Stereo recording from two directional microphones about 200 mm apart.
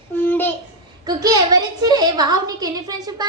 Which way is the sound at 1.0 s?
20° right (ahead or behind).